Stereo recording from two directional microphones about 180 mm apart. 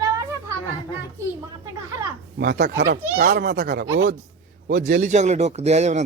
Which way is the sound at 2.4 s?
70° right (ahead or behind).